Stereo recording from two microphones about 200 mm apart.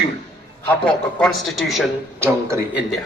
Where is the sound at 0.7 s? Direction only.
5° left (ahead or behind).